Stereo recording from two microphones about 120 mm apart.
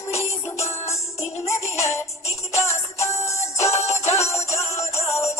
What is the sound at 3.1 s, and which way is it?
Music, 25° left (ahead or behind).